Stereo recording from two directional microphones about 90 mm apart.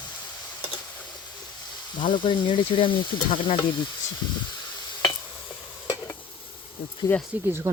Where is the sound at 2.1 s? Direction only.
65° left (ahead or behind).